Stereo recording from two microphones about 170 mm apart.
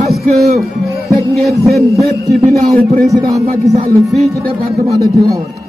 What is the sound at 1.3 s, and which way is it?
Speech, centre (ahead or behind).